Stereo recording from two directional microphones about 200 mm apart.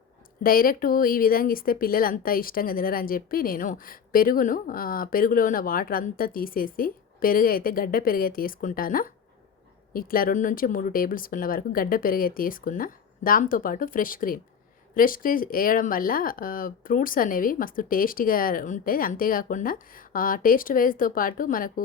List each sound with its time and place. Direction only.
0.4 s speech: 45° left (ahead or behind)